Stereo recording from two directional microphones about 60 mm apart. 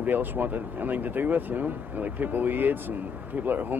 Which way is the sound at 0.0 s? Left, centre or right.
Right.